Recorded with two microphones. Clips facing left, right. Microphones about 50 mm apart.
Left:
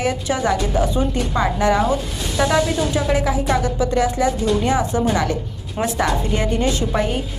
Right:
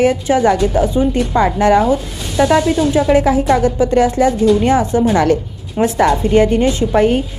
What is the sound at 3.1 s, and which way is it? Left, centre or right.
A woman's voice, right.